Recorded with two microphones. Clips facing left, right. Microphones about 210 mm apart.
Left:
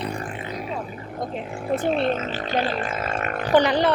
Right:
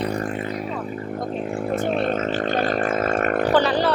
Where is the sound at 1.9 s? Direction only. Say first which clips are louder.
Even; 50° right (ahead or behind).